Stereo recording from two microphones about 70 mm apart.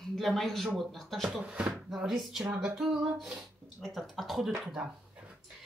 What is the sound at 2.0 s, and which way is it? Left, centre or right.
A woman's voice, centre.